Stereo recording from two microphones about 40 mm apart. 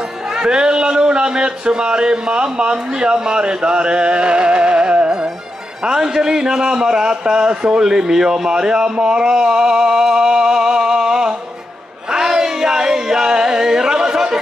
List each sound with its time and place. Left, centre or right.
0.3 s a man's voice: centre
9.0 s music: centre
12.1 s a sound: centre